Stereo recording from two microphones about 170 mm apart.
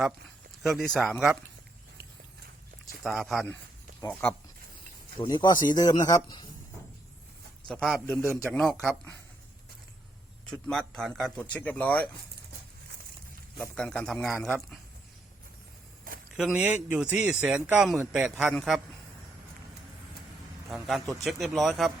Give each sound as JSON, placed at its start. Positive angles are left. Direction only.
{"t": 0.6, "sound": "a man's voice", "side_deg": 0}
{"t": 3.0, "sound": "a man's voice", "side_deg": 0}
{"t": 5.2, "sound": "speech", "side_deg": 25}
{"t": 7.7, "sound": "a man's voice", "side_deg": 0}
{"t": 10.4, "sound": "a man's voice", "side_deg": 5}
{"t": 13.6, "sound": "a man's voice", "side_deg": 5}
{"t": 16.3, "sound": "a man's voice", "side_deg": -5}
{"t": 20.7, "sound": "a man's voice", "side_deg": 0}